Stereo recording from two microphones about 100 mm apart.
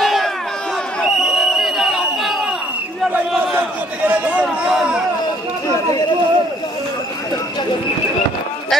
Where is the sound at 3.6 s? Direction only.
15° right (ahead or behind).